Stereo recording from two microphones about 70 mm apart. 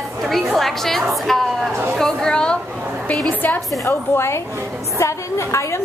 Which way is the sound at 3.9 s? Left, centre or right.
Left.